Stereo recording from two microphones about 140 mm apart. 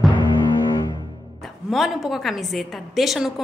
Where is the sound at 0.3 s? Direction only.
35° left (ahead or behind).